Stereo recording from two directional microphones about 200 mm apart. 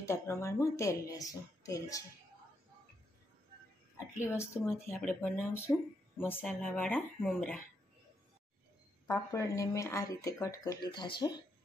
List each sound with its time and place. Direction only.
0.0 s speech: 15° left (ahead or behind)
4.4 s speech: 10° left (ahead or behind)
9.0 s speech: 15° left (ahead or behind)